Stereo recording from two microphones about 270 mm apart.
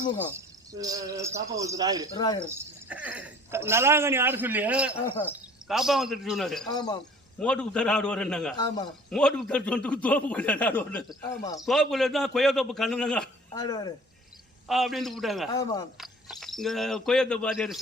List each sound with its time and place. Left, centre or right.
0.2 s speech: centre
2.1 s speech: centre
2.5 s a man's voice: centre
6.7 s speech: centre
7.3 s a man's voice: centre
8.5 s speech: centre
9.0 s a man's voice: centre
13.5 s speech: centre
14.7 s a man's voice: centre
15.5 s speech: centre
16.0 s speech: centre